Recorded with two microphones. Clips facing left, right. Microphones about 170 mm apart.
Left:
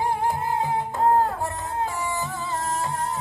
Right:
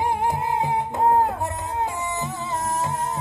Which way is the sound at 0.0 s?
20° right (ahead or behind).